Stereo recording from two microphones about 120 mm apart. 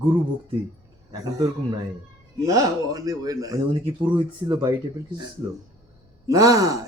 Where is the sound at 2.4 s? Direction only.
30° right (ahead or behind).